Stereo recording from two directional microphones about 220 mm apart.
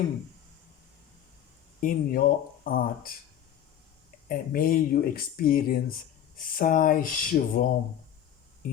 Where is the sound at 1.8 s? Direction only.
40° left (ahead or behind).